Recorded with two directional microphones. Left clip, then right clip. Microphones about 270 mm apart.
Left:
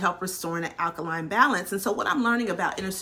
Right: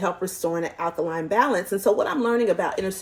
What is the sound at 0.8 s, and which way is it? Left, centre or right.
Speech, centre.